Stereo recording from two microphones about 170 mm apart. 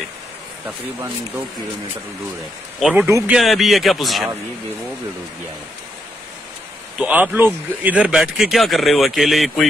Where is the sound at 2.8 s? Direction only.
5° right (ahead or behind).